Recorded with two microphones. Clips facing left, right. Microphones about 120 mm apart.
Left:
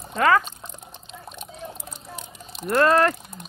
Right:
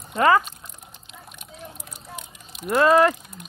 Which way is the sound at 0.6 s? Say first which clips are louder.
Left 4 dB; 30° left (ahead or behind).